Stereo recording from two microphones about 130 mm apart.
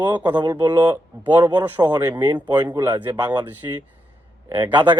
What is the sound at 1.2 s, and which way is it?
Speech, 35° right (ahead or behind).